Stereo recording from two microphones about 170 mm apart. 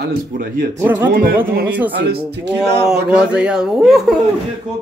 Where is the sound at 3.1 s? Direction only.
5° right (ahead or behind).